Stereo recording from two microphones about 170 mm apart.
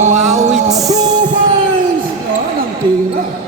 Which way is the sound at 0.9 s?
25° right (ahead or behind).